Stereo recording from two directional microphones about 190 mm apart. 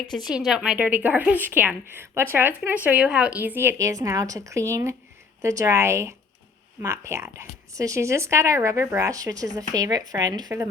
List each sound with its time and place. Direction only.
0.1 s a woman's voice: centre (ahead or behind); by 10.7 s 20° right (ahead or behind)